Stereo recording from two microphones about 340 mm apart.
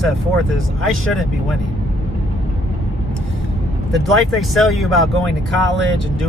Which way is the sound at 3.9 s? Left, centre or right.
Centre.